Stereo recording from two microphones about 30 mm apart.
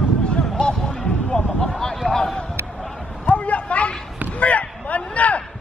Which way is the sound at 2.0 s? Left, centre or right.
Left.